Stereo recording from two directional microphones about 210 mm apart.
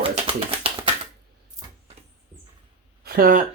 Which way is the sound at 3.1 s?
45° right (ahead or behind).